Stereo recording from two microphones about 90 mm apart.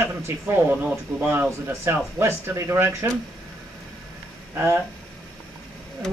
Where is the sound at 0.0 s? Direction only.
20° right (ahead or behind).